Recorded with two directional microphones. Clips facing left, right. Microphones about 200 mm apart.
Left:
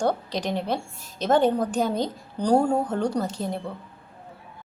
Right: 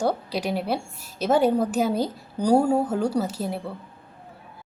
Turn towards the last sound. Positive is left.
turn(degrees=-5)  # may be behind; listen again after turning